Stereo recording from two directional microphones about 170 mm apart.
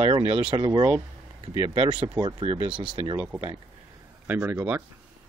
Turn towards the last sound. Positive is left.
turn(degrees=-10)  # may be behind; listen again after turning